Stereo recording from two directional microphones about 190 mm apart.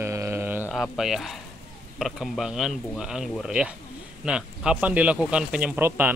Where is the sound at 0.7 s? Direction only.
Centre (ahead or behind).